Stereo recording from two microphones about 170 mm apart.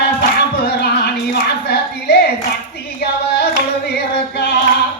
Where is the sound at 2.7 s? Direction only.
75° left (ahead or behind).